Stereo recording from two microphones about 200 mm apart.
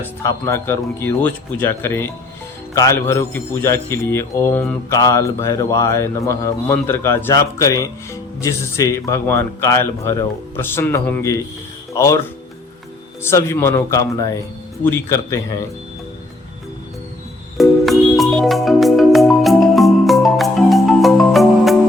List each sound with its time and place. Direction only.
0.2 s speech: 15° left (ahead or behind)
13.2 s speech: 15° left (ahead or behind)
17.6 s music: centre (ahead or behind)